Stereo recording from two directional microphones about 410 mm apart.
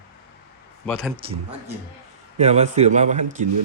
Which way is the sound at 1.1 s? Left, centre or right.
Centre.